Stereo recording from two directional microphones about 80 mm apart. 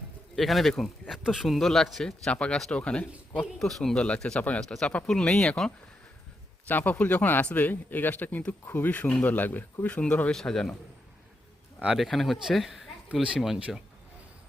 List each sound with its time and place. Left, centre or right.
0.3 s speech: centre
3.6 s speech: centre
3.9 s speech: centre
6.7 s speech: left
11.9 s speech: centre
13.6 s speech: centre